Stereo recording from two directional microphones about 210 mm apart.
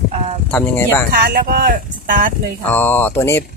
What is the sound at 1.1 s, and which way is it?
Speech, 40° right (ahead or behind).